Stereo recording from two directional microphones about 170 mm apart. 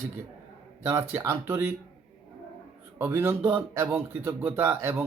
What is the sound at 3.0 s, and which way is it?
Speech, 15° right (ahead or behind).